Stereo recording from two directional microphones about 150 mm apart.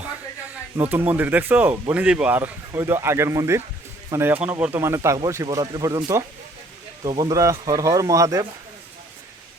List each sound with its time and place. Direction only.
0.8 s speech: 15° right (ahead or behind)